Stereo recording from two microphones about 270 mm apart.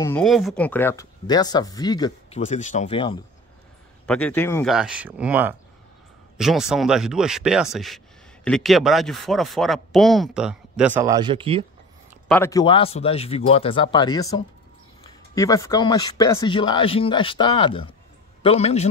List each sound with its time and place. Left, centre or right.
0.0 s speech: centre
4.0 s speech: centre
4.7 s speech: centre
12.3 s speech: centre